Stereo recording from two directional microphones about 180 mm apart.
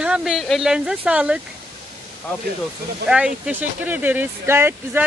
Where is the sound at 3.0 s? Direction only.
5° right (ahead or behind).